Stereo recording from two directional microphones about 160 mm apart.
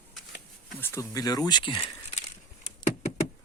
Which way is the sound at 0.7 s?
15° left (ahead or behind).